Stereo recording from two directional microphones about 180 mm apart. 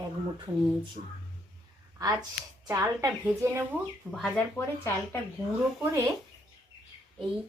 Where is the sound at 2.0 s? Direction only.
20° right (ahead or behind).